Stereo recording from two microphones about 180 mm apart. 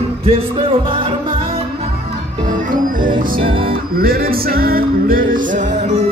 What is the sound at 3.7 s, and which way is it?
Music, 55° right (ahead or behind).